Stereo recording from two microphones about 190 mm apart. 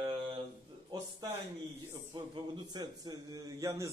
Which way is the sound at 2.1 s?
25° right (ahead or behind).